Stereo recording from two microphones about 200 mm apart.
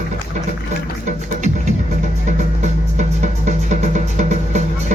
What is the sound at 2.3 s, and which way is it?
Music, 35° right (ahead or behind).